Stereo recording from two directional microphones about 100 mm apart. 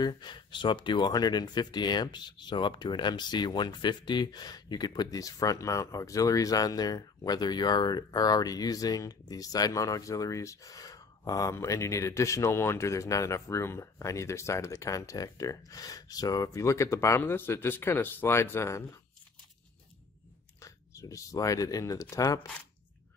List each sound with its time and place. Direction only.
0.0 s speech: 50° left (ahead or behind); by 18.9 s 30° left (ahead or behind)
20.6 s speech: 35° left (ahead or behind)